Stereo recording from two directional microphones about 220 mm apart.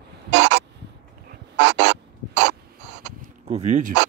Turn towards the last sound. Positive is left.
turn(degrees=-30)  # may be behind; listen again after turning